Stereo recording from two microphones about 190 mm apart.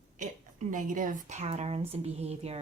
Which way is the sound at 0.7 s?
45° right (ahead or behind).